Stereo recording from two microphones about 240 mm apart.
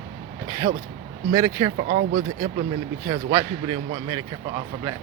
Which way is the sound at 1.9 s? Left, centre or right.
Right.